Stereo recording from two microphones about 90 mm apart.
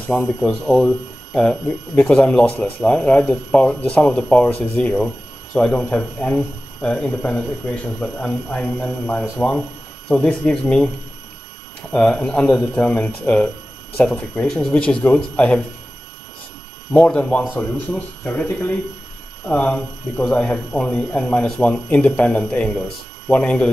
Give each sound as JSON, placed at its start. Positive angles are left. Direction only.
{"t": 0.1, "sound": "speech", "side_deg": 5}
{"t": 11.9, "sound": "speech", "side_deg": 10}
{"t": 16.9, "sound": "speech", "side_deg": 15}